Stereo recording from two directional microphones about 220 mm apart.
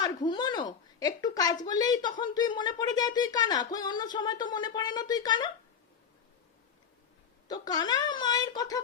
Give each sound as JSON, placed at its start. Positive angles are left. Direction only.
{"t": 0.0, "sound": "a sound", "side_deg": 20}
{"t": 1.6, "sound": "speech", "side_deg": 15}
{"t": 7.4, "sound": "speech", "side_deg": 15}